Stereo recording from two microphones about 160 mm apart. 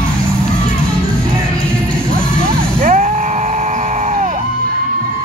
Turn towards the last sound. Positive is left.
turn(degrees=-50)  # may be behind; listen again after turning